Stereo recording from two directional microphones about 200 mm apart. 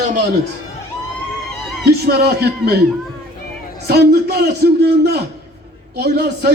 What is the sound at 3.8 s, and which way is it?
A man's voice, 55° right (ahead or behind).